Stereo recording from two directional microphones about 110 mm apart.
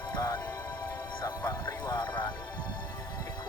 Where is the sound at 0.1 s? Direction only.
35° left (ahead or behind).